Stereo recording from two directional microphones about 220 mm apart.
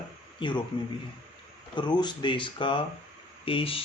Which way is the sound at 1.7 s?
20° left (ahead or behind).